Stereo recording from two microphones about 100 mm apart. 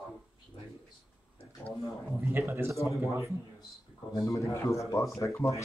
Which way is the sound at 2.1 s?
25° right (ahead or behind).